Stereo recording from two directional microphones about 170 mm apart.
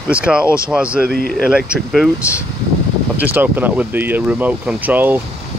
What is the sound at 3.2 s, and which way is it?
Speech, 10° right (ahead or behind).